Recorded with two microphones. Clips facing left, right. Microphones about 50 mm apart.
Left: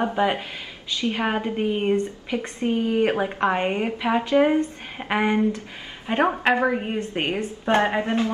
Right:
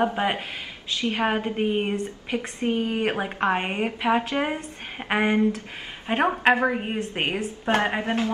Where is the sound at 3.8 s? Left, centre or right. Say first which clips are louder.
Even; right.